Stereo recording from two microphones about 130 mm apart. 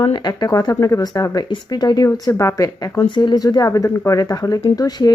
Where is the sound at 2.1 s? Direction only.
20° left (ahead or behind).